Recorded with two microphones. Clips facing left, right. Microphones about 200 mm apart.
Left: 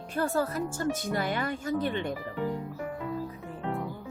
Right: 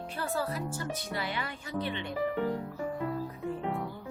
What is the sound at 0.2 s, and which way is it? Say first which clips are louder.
Speech: left 6 dB; 45° left (ahead or behind).